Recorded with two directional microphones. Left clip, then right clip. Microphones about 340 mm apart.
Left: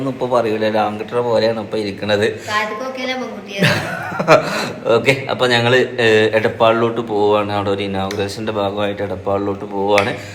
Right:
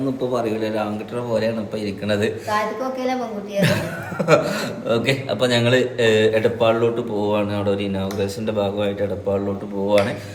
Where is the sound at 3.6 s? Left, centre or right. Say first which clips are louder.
Left 5 dB; centre.